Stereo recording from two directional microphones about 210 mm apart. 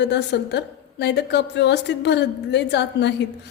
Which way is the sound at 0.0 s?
55° left (ahead or behind).